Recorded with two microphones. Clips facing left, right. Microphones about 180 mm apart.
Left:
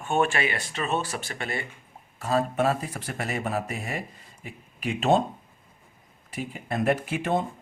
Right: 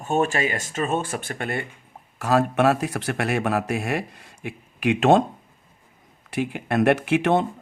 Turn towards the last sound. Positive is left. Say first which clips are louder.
# right 7 dB
turn(degrees=-75)  # may be behind; listen again after turning